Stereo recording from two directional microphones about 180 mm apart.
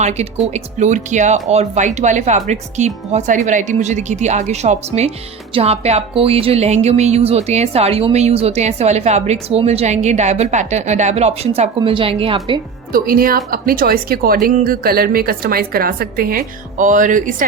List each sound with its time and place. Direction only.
0.0 s a woman's voice: 40° right (ahead or behind)
12.9 s a woman's voice: 55° right (ahead or behind)